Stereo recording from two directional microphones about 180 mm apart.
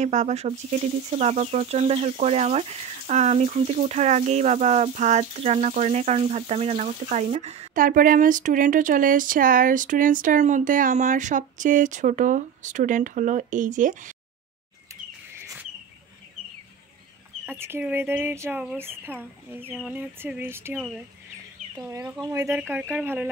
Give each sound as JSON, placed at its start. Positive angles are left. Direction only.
{"t": 0.0, "sound": "speech", "side_deg": -40}
{"t": 17.5, "sound": "speech", "side_deg": -10}
{"t": 21.9, "sound": "speech", "side_deg": -15}
{"t": 22.6, "sound": "speech", "side_deg": -5}